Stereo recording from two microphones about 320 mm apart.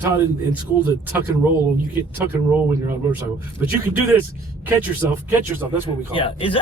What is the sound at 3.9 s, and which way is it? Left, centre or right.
A man's voice, centre.